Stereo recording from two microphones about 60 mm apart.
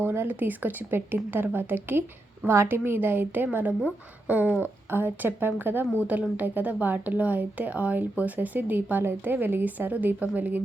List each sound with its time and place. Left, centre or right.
0.0 s speech: right
5.8 s speech: left
6.1 s speech: right